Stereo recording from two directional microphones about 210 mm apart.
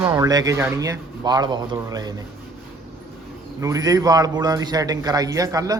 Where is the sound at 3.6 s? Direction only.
15° right (ahead or behind).